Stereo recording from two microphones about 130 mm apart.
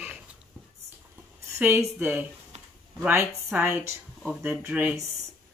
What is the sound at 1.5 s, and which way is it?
Speech, 15° right (ahead or behind).